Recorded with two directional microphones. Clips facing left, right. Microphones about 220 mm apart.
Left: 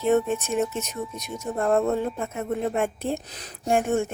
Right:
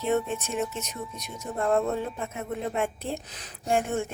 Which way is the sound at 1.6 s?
50° left (ahead or behind).